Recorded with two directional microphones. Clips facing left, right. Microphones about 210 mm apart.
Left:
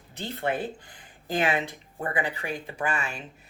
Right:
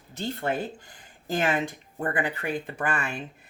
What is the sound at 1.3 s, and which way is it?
Speech, 45° right (ahead or behind).